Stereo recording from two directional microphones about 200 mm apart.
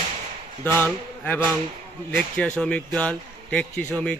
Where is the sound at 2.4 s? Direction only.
5° left (ahead or behind).